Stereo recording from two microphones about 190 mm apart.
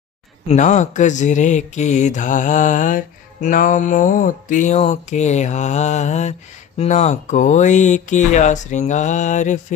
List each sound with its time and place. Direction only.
0.5 s speech: 40° left (ahead or behind)